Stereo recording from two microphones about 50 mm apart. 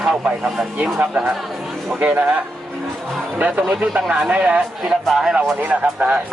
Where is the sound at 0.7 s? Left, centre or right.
Right.